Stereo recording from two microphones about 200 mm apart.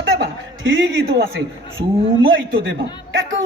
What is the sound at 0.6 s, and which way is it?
A man's voice, 70° right (ahead or behind).